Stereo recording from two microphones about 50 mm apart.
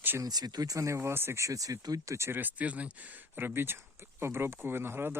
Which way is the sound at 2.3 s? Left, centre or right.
Right.